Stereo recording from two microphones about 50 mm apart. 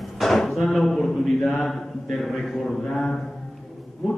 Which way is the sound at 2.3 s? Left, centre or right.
Centre.